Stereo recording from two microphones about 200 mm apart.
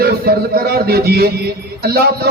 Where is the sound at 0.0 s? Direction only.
50° right (ahead or behind).